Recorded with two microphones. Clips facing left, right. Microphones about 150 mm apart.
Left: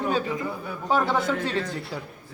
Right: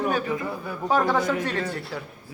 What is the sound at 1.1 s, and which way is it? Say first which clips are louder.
Speech: right 1 dB; 15° right (ahead or behind).